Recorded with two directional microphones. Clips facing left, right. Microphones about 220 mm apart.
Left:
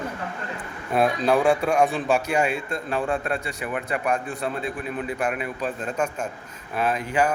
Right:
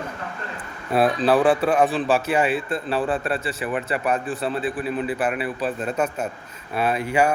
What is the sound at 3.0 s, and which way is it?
Speech, 30° right (ahead or behind).